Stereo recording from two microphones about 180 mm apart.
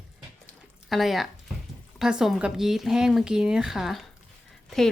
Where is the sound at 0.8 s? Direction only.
Centre (ahead or behind).